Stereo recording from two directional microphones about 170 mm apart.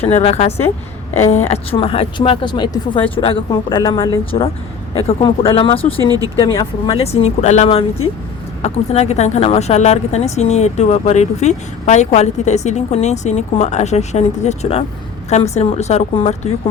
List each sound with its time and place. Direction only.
0.0 s a woman's voice: 35° left (ahead or behind)
6.0 s speech: 20° right (ahead or behind)
6.3 s a woman's voice: 25° left (ahead or behind); by 16.5 s 40° left (ahead or behind)